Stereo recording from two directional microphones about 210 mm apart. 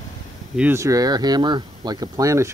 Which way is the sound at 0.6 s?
10° right (ahead or behind).